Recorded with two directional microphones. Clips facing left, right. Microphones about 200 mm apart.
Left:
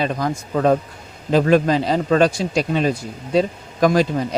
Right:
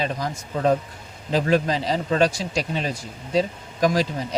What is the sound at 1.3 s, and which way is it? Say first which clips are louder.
A man's voice: left 6 dB; 55° left (ahead or behind).